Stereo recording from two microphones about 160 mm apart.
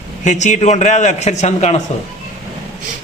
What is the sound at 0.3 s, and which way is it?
A man's voice, 45° left (ahead or behind).